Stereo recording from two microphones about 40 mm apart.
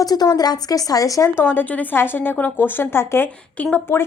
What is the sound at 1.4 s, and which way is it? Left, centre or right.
Speech, left.